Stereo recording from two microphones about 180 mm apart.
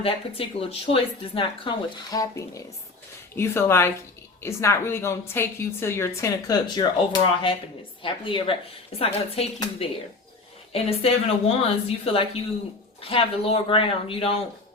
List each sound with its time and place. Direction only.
0.0 s a woman's voice: 30° left (ahead or behind)
10.7 s a woman's voice: 35° left (ahead or behind)